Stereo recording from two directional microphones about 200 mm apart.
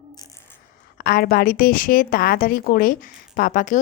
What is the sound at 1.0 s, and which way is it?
A woman's voice, 45° left (ahead or behind).